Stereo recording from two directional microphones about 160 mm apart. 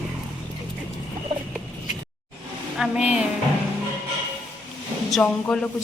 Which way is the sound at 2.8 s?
5° right (ahead or behind).